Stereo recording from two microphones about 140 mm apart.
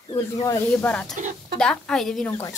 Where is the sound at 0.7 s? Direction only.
10° left (ahead or behind).